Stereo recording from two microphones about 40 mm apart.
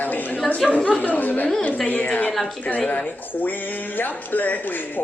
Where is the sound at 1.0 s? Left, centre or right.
Left.